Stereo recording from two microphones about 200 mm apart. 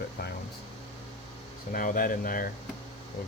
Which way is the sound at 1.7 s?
45° left (ahead or behind).